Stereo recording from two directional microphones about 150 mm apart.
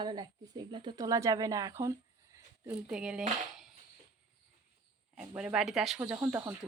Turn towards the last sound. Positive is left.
turn(degrees=-15)  # may be behind; listen again after turning